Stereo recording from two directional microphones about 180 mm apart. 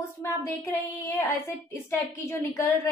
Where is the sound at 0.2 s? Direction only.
15° left (ahead or behind).